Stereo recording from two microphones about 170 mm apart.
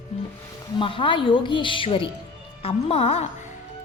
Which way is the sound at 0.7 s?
30° left (ahead or behind).